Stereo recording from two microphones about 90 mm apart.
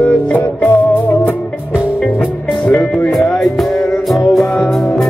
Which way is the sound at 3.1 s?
5° left (ahead or behind).